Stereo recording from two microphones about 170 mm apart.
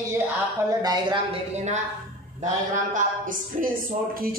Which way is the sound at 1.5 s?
40° right (ahead or behind).